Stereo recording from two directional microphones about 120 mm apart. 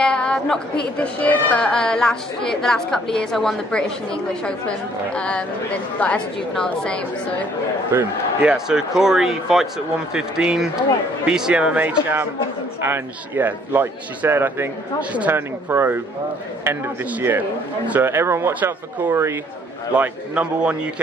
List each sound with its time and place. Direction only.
0.0 s a woman's voice: 5° left (ahead or behind)
7.9 s a man's voice: 15° right (ahead or behind)
17.2 s a man's voice: 15° right (ahead or behind)